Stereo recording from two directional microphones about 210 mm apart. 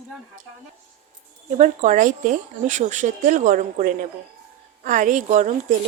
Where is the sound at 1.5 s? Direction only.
35° right (ahead or behind).